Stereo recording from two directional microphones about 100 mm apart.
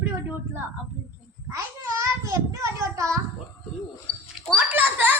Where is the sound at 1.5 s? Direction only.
30° right (ahead or behind).